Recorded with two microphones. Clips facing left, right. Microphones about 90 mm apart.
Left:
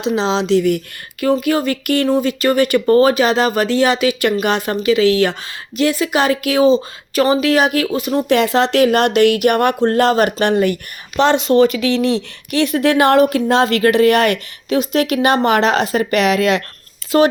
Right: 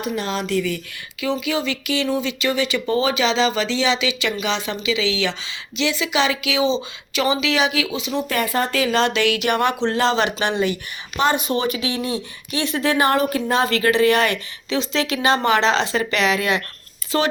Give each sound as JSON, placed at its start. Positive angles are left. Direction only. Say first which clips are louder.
{"t": 0.0, "sound": "speech", "louder": "left 7 dB", "side_deg": 90}
{"t": 1.2, "sound": "speech", "louder": "left 7 dB", "side_deg": 50}
{"t": 8.3, "sound": "speech", "louder": "left 9 dB", "side_deg": 85}
{"t": 11.2, "sound": "speech", "louder": "left 8 dB", "side_deg": 75}
{"t": 13.8, "sound": "speech", "louder": "left 4 dB", "side_deg": 60}
{"t": 17.1, "sound": "speech", "louder": "left 8 dB", "side_deg": 40}